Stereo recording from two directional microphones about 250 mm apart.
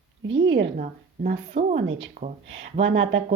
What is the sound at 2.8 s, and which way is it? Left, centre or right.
Speech, right.